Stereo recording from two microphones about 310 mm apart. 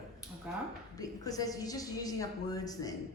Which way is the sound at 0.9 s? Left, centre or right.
Centre.